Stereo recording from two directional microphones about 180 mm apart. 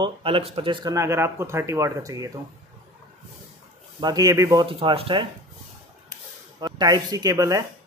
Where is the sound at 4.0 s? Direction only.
20° right (ahead or behind).